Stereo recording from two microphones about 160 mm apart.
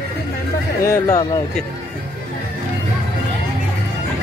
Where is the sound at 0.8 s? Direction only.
20° left (ahead or behind).